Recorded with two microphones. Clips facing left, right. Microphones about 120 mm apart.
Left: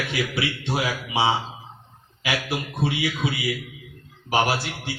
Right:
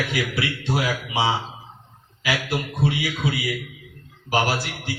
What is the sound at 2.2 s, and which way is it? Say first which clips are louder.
A man's voice: right 2 dB; 25° left (ahead or behind).